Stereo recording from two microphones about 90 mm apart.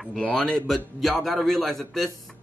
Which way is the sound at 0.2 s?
5° left (ahead or behind).